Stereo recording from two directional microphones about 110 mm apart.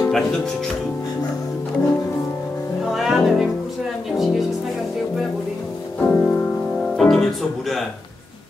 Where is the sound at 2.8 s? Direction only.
Centre (ahead or behind).